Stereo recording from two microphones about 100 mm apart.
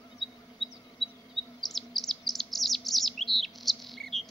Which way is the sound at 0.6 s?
60° left (ahead or behind).